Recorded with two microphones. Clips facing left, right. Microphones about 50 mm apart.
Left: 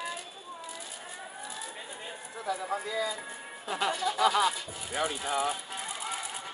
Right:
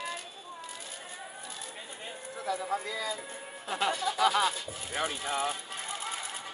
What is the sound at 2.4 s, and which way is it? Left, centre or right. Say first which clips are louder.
Speech: even; left.